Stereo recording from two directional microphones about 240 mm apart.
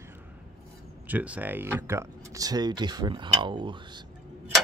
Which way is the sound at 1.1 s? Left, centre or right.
Centre.